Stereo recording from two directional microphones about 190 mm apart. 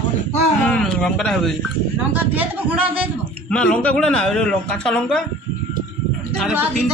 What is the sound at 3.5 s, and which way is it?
A woman's voice, 5° left (ahead or behind).